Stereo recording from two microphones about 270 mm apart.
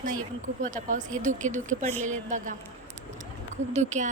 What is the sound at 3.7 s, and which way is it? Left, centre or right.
Speech, right.